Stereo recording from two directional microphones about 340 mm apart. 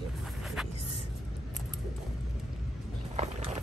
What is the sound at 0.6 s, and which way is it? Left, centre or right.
Speech, centre.